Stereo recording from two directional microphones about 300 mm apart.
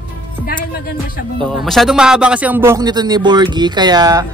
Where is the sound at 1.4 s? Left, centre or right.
Centre.